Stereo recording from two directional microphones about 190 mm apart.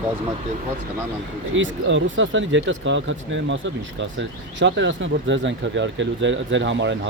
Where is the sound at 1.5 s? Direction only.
85° right.